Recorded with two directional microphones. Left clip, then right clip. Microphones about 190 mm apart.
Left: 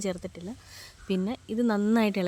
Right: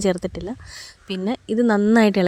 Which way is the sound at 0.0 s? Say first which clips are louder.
Right 11 dB; 45° right (ahead or behind).